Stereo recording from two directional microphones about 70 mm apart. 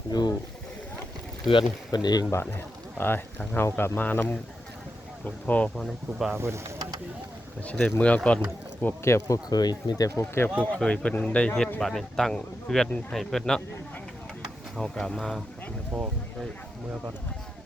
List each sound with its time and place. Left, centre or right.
0.1 s a sound: left
1.9 s speech: left
3.0 s speech: left
5.7 s speech: centre
6.3 s speech: right
7.7 s speech: left
9.0 s speech: left
9.5 s speech: left
10.2 s speech: left
10.8 s speech: centre
11.8 s speech: centre
14.8 s speech: centre